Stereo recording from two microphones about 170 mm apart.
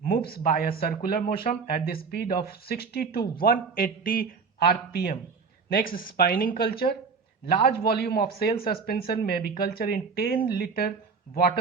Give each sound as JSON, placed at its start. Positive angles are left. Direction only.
{"t": 0.0, "sound": "speech", "side_deg": 60}